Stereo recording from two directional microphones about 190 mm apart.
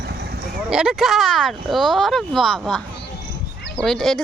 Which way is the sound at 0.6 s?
5° right (ahead or behind).